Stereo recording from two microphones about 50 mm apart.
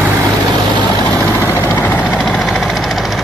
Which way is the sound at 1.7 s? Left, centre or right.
Left.